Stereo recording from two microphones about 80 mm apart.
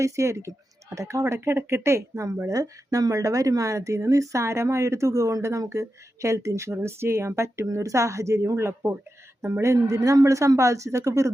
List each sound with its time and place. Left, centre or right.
0.0 s speech: right